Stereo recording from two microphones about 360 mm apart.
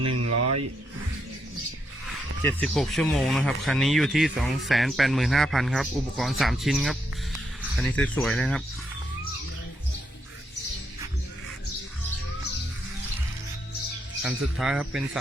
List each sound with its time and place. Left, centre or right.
0.1 s speech: right
2.4 s speech: centre
14.3 s speech: centre